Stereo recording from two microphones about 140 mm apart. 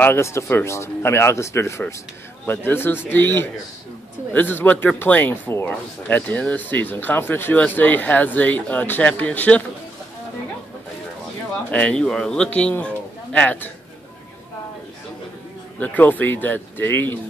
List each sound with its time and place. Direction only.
0.0 s a man's voice: 20° left (ahead or behind)
11.7 s speech: 5° left (ahead or behind)
15.8 s speech: 10° left (ahead or behind)